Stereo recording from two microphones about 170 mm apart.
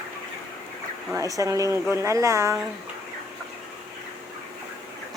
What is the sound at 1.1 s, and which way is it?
Speech, 20° right (ahead or behind).